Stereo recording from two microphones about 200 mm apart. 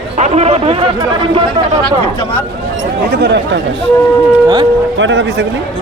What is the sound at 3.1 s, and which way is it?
Speech, 55° right (ahead or behind).